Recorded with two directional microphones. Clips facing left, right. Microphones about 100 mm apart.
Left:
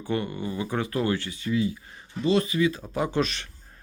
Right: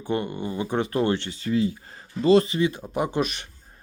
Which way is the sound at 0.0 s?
20° right (ahead or behind).